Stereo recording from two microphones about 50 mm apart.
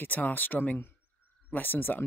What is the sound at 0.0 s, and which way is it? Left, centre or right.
Speech, left.